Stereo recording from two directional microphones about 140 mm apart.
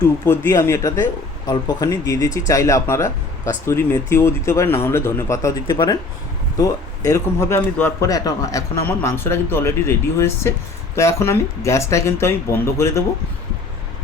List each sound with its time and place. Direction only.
0.3 s speech: 20° left (ahead or behind)
5.6 s speech: 35° left (ahead or behind)
6.6 s speech: 25° left (ahead or behind)
8.9 s speech: 15° left (ahead or behind)